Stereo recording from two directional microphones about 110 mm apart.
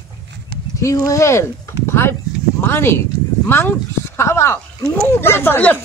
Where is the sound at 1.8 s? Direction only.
25° left (ahead or behind).